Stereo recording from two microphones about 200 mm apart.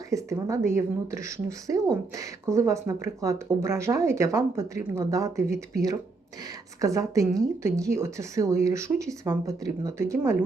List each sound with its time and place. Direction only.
0.1 s speech: 15° right (ahead or behind)